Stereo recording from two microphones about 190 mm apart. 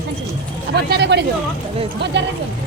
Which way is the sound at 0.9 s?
60° right (ahead or behind).